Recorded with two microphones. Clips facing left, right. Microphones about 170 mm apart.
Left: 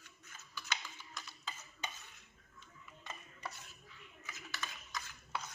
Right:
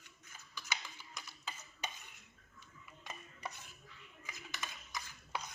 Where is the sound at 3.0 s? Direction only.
15° right (ahead or behind).